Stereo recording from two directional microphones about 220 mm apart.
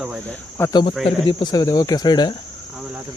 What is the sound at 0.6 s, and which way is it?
Speech, 20° left (ahead or behind).